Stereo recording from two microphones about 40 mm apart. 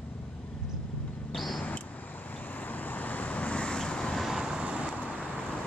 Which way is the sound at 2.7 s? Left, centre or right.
Left.